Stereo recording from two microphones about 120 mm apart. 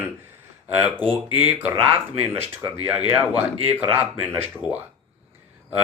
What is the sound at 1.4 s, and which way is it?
A man's voice, 15° right (ahead or behind).